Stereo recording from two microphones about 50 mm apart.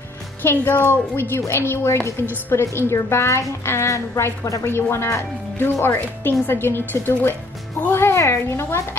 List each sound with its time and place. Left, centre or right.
0.4 s a woman's voice: left
4.6 s speech: left